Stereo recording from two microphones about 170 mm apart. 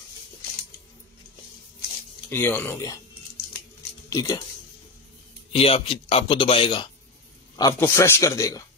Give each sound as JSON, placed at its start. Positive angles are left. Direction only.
{"t": 2.2, "sound": "speech", "side_deg": 10}
{"t": 4.1, "sound": "speech", "side_deg": 25}
{"t": 5.5, "sound": "speech", "side_deg": 35}
{"t": 7.5, "sound": "speech", "side_deg": 20}